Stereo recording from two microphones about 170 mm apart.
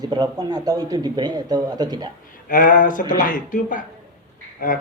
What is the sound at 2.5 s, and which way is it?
Speech, 50° left (ahead or behind).